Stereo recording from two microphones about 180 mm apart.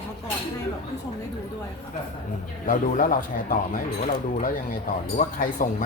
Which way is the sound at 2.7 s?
50° left (ahead or behind).